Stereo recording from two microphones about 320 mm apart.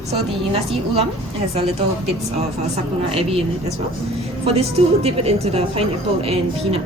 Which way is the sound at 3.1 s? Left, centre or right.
Centre.